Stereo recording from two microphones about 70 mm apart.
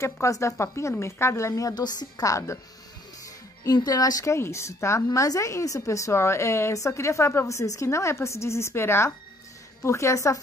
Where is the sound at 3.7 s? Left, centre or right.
Left.